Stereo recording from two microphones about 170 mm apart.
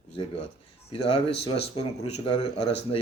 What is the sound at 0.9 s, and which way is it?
Speech, 35° left (ahead or behind).